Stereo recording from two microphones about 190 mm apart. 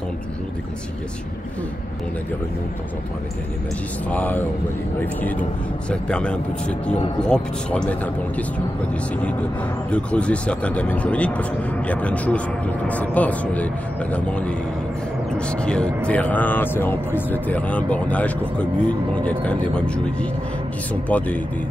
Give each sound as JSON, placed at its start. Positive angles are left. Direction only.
{"t": 4.1, "sound": "speech", "side_deg": 10}
{"t": 5.9, "sound": "speech", "side_deg": 5}
{"t": 9.8, "sound": "speech", "side_deg": 5}